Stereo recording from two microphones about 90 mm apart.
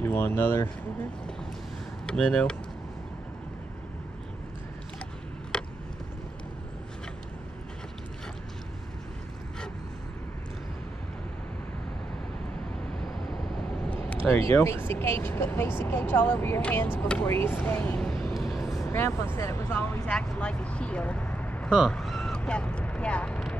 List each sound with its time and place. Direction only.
0.0 s speech: 20° left (ahead or behind)
2.0 s speech: 10° left (ahead or behind)
5.5 s vehicle: 10° left (ahead or behind)
13.9 s a sound: 25° left (ahead or behind)
14.4 s speech: 30° left (ahead or behind)
17.9 s vehicle: 10° left (ahead or behind)
18.9 s speech: 30° left (ahead or behind)
20.1 s speech: 10° left (ahead or behind)
21.6 s speech: 5° right (ahead or behind)
21.9 s a sound: centre (ahead or behind)
22.4 s speech: 15° left (ahead or behind)